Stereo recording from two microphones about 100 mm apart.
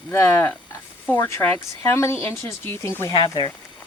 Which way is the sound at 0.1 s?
25° left (ahead or behind).